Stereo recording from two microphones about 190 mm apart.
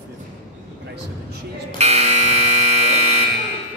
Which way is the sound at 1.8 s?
35° right (ahead or behind).